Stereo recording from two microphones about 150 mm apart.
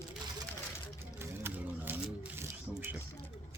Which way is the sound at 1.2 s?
15° right (ahead or behind).